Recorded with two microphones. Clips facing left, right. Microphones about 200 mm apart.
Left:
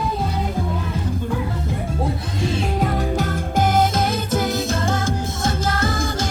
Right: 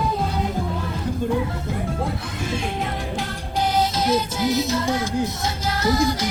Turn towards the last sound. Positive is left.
turn(degrees=50)  # may be behind; listen again after turning